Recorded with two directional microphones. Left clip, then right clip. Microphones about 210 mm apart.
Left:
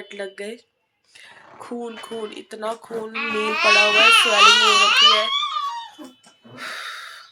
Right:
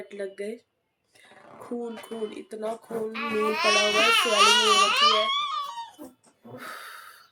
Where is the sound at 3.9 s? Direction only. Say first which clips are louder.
Left 7 dB; 45° right (ahead or behind).